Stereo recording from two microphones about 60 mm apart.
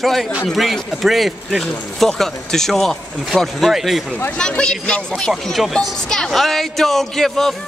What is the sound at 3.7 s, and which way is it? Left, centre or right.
Speech, centre.